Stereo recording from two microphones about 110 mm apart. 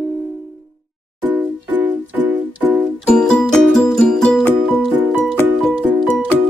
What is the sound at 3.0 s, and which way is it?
Music, 10° left (ahead or behind).